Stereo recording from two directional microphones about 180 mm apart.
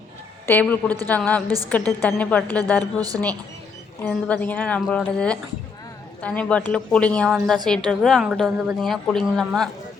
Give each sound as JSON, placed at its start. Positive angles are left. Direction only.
{"t": 0.4, "sound": "speech", "side_deg": 10}
{"t": 1.5, "sound": "a woman's voice", "side_deg": -20}
{"t": 1.7, "sound": "speech", "side_deg": 10}
{"t": 4.1, "sound": "a woman's voice", "side_deg": 10}